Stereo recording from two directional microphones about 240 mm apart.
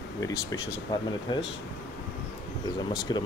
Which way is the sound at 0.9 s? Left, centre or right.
Centre.